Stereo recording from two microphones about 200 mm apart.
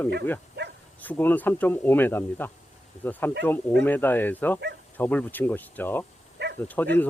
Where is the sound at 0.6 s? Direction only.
60° right (ahead or behind).